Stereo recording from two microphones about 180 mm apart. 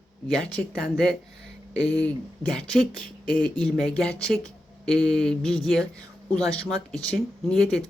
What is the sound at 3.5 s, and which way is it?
Speech, 5° left (ahead or behind).